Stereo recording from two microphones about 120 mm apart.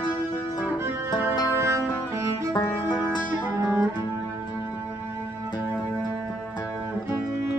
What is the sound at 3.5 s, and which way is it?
Music, 20° right (ahead or behind).